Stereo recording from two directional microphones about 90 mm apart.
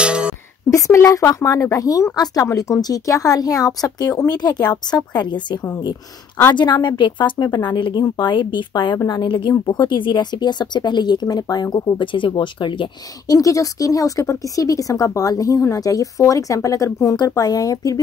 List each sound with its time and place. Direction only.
0.0 s a sound: 10° right (ahead or behind)
0.7 s speech: 35° left (ahead or behind); by 9.5 s 60° left (ahead or behind)
9.5 s speech: 50° left (ahead or behind)
13.3 s speech: 40° left (ahead or behind)